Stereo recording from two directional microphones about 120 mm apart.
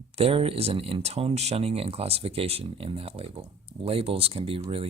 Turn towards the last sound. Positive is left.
turn(degrees=-50)  # may be behind; listen again after turning